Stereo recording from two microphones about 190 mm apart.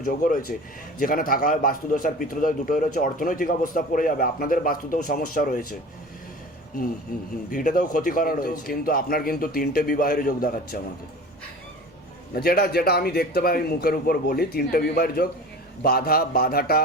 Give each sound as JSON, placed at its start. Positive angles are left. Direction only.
{"t": 0.0, "sound": "a man's voice", "side_deg": 45}
{"t": 7.1, "sound": "a man's voice", "side_deg": 50}
{"t": 12.3, "sound": "a man's voice", "side_deg": 50}